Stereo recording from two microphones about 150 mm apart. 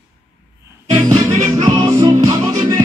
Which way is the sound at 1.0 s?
25° right (ahead or behind).